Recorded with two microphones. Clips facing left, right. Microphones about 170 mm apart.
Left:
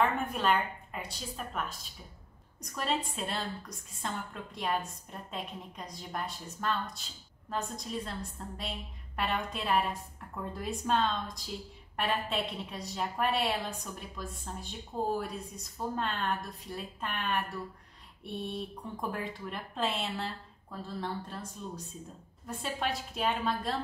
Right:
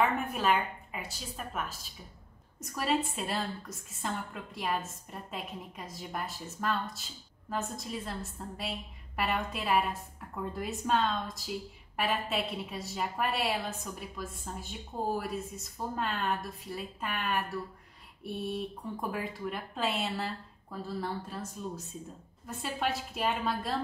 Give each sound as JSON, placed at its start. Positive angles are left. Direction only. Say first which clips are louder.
{"t": 0.0, "sound": "a woman's voice", "louder": "even", "side_deg": -5}